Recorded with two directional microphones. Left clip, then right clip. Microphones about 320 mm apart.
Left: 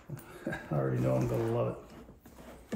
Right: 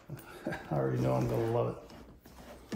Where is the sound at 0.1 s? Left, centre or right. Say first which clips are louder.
Even; centre.